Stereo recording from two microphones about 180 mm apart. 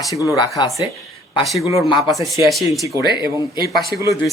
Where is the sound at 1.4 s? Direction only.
Centre (ahead or behind).